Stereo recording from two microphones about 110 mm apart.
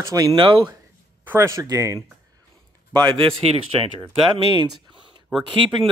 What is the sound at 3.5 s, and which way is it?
Speech, 60° right (ahead or behind).